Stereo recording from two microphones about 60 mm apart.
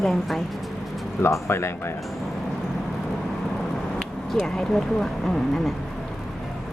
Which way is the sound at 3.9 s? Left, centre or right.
Centre.